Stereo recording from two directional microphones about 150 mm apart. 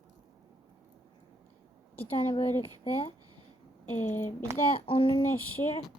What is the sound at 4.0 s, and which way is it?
Speech, 15° left (ahead or behind).